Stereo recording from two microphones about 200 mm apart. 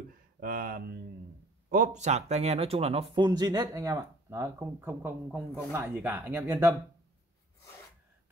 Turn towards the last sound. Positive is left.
turn(degrees=-15)  # may be behind; listen again after turning